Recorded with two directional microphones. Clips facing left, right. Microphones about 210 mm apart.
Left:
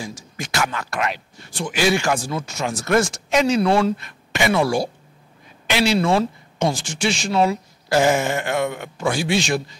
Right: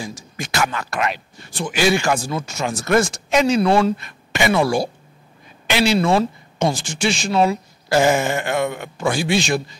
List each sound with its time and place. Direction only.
0.0 s speech: 10° right (ahead or behind)
2.1 s speech: 25° right (ahead or behind)
2.4 s speech: 10° right (ahead or behind)
2.7 s speech: 20° right (ahead or behind)
3.0 s speech: 10° right (ahead or behind)